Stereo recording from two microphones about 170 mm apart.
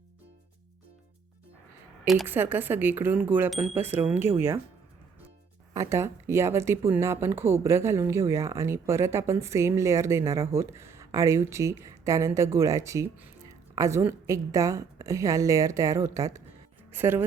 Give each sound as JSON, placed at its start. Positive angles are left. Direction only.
{"t": 2.2, "sound": "speech", "side_deg": -10}
{"t": 5.7, "sound": "speech", "side_deg": -15}